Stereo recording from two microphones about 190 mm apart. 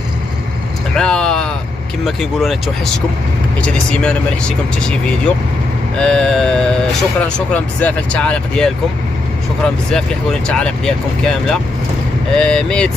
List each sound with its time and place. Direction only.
0.9 s vehicle: 5° left (ahead or behind)
2.0 s speech: centre (ahead or behind)
10.5 s speech: 5° left (ahead or behind)